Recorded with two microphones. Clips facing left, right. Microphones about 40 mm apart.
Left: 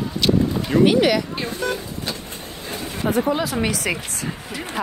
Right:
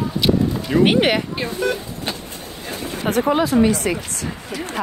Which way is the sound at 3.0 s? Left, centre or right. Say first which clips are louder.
Right 1 dB; right.